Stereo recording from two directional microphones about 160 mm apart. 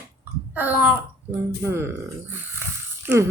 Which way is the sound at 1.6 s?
15° right (ahead or behind).